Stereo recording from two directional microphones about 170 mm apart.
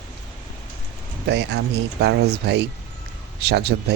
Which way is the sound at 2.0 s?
80° right.